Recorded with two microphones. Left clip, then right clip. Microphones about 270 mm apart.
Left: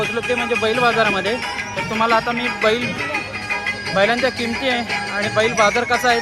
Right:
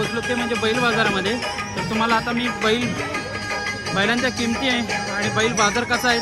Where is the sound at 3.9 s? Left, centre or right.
Centre.